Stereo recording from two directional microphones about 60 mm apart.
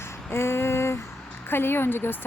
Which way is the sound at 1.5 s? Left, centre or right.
Left.